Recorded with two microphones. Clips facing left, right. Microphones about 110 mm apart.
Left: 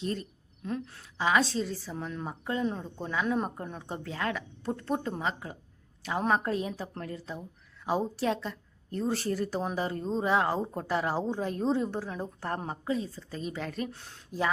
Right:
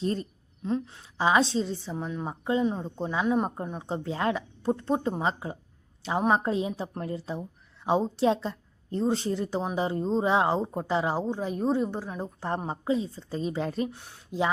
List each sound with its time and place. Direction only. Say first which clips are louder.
0.0 s a woman's voice: right 4 dB; 35° right (ahead or behind)
13.9 s speech: right 1 dB; 15° right (ahead or behind)